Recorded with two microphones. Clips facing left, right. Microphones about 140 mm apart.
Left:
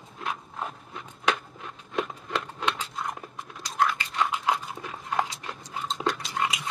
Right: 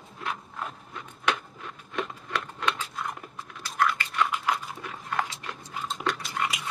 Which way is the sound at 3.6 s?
20° left (ahead or behind).